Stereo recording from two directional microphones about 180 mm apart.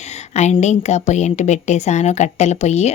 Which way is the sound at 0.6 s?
40° left (ahead or behind).